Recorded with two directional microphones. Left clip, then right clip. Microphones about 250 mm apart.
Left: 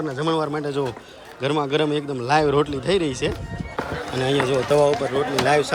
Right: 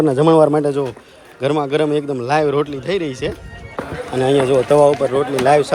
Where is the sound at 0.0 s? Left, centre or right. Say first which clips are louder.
Right 12 dB; right.